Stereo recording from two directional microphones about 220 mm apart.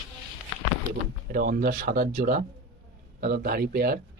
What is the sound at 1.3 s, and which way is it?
Speech, 45° right (ahead or behind).